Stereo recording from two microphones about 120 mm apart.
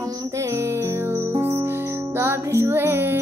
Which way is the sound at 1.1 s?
20° right (ahead or behind).